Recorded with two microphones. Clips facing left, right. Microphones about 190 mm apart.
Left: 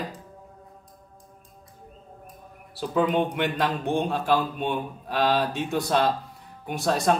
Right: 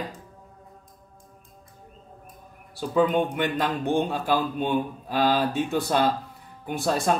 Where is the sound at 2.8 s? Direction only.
Centre (ahead or behind).